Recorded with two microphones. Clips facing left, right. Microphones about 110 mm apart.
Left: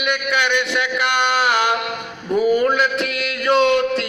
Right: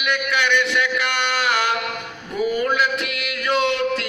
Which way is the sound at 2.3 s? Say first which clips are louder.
Left 5 dB; 35° left (ahead or behind).